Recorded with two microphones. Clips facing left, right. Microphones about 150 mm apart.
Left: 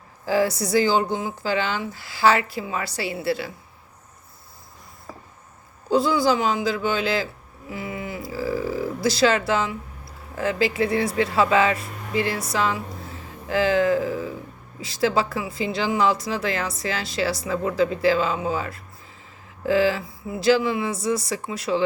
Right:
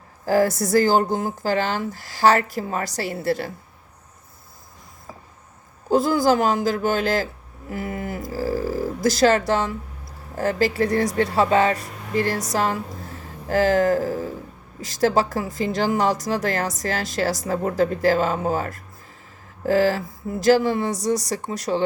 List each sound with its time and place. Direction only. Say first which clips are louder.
0.3 s speech: right 2 dB; 45° right (ahead or behind)
5.9 s speech: right 2 dB; 45° right (ahead or behind)